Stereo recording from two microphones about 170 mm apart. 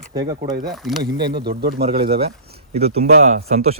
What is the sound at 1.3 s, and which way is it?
Speech, 65° right (ahead or behind).